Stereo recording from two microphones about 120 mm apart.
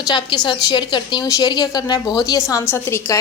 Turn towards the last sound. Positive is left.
turn(degrees=20)  # may be behind; listen again after turning